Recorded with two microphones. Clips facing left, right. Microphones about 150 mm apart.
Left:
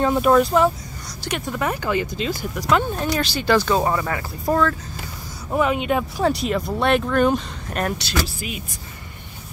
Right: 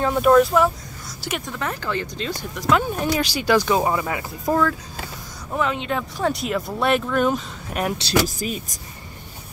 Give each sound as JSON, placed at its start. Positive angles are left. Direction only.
{"t": 0.0, "sound": "speech", "side_deg": 5}
{"t": 1.6, "sound": "speech", "side_deg": 10}
{"t": 3.0, "sound": "speech", "side_deg": -10}
{"t": 5.5, "sound": "speech", "side_deg": 10}
{"t": 6.2, "sound": "speech", "side_deg": 0}
{"t": 8.1, "sound": "speech", "side_deg": -40}